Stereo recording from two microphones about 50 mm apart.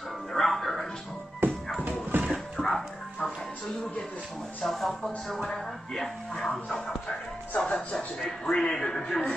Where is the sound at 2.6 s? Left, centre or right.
Centre.